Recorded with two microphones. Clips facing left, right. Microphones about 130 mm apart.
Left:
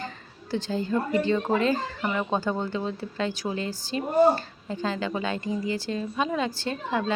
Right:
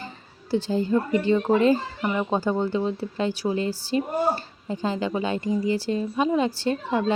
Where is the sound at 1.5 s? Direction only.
15° right (ahead or behind).